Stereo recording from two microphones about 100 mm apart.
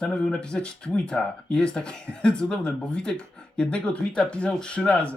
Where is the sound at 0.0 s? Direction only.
10° left (ahead or behind).